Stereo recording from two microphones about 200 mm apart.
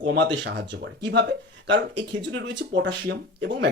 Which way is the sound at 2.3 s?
60° right (ahead or behind).